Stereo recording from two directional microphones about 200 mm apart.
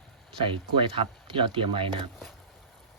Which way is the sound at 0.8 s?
25° right (ahead or behind).